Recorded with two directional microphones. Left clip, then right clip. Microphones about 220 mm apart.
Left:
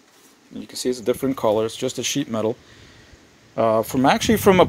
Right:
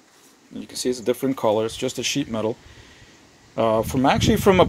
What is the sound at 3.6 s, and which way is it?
Speech, 5° left (ahead or behind).